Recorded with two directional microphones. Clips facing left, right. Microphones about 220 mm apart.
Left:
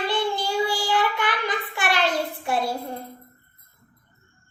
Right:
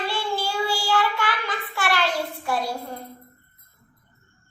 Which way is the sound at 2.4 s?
25° left (ahead or behind).